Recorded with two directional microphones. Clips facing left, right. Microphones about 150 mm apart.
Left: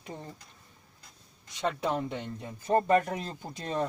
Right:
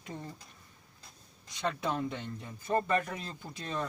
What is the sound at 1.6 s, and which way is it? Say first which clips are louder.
Speech: left 3 dB; 25° left (ahead or behind).